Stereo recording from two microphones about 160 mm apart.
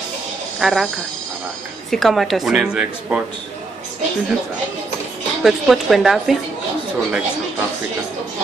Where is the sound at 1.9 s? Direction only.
Centre (ahead or behind).